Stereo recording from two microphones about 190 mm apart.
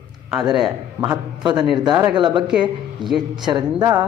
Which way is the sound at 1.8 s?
20° right (ahead or behind).